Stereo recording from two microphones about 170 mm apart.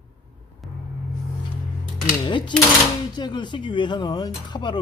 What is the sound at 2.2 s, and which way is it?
Speech, 25° left (ahead or behind).